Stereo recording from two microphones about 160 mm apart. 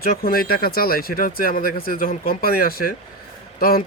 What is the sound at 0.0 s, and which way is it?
Speech, 70° left (ahead or behind).